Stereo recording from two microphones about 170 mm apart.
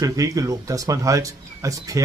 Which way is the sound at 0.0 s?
20° right (ahead or behind).